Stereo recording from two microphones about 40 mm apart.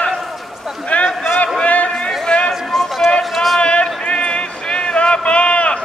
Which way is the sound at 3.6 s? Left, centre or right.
Left.